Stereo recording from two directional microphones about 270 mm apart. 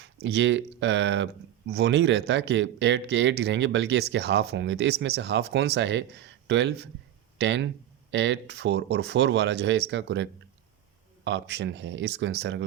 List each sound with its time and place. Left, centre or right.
0.0 s speech: right